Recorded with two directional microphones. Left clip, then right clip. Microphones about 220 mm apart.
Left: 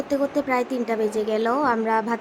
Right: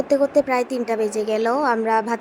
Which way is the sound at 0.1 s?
15° right (ahead or behind).